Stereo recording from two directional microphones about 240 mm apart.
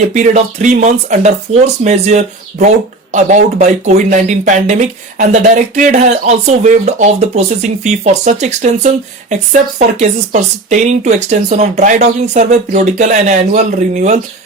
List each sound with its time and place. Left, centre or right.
0.1 s speech: right